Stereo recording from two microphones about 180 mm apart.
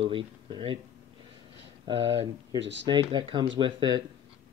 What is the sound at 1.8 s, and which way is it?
Speech, 30° right (ahead or behind).